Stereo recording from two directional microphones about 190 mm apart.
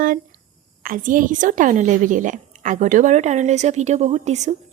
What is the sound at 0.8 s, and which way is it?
A woman's voice, 45° right (ahead or behind).